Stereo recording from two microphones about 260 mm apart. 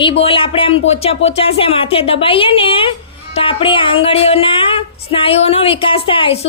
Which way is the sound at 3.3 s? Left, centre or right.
Centre.